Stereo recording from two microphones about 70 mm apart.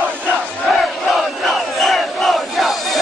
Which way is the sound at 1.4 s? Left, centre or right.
Centre.